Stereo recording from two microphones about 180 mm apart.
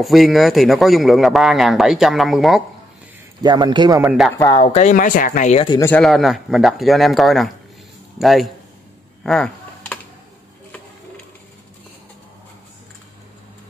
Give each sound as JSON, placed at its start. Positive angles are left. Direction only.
{"t": 0.0, "sound": "speech", "side_deg": 0}
{"t": 3.4, "sound": "speech", "side_deg": -25}
{"t": 4.0, "sound": "speech", "side_deg": -5}
{"t": 4.6, "sound": "speech", "side_deg": 40}
{"t": 5.7, "sound": "speech", "side_deg": 15}
{"t": 5.9, "sound": "speech", "side_deg": 0}
{"t": 9.2, "sound": "a sound", "side_deg": 5}